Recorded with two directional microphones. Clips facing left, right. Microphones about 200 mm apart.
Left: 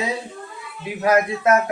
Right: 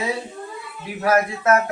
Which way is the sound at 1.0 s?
20° left (ahead or behind).